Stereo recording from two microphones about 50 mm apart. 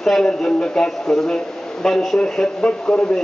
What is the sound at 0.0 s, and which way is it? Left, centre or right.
A man's voice, centre.